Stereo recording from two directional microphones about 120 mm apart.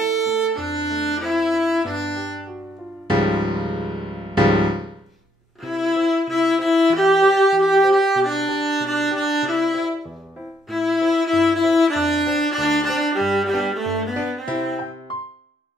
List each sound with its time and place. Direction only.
0.0 s music: centre (ahead or behind)
3.3 s music: 45° right (ahead or behind)
5.7 s music: centre (ahead or behind)